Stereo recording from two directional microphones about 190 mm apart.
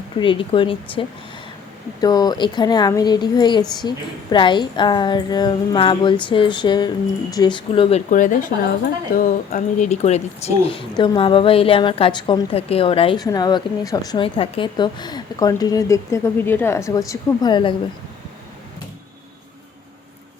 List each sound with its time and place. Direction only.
0.2 s speech: 25° left (ahead or behind)
8.1 s speech: 45° left (ahead or behind); by 17.7 s 25° left (ahead or behind)